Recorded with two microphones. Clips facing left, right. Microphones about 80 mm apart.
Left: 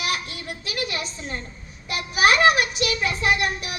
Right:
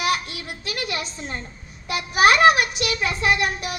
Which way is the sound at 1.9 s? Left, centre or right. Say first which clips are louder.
Right 2 dB; right.